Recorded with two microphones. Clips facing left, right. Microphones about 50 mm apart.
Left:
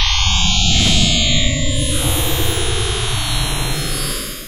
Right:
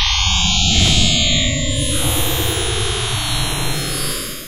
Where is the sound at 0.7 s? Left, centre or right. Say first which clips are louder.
Even; centre.